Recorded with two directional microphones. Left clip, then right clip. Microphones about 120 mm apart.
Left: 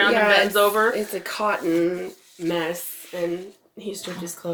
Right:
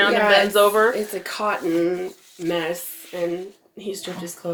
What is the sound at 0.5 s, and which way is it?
Speech, 35° right (ahead or behind).